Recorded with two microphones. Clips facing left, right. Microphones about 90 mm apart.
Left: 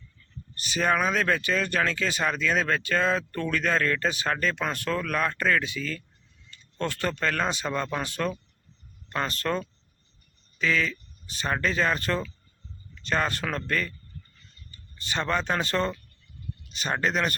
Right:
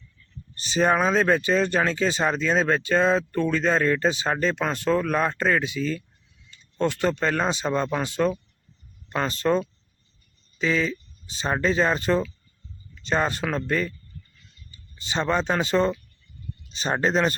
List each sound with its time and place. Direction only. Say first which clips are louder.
0.5 s speech: right 4 dB; 30° right (ahead or behind)
16.6 s speech: right 4 dB; 25° right (ahead or behind)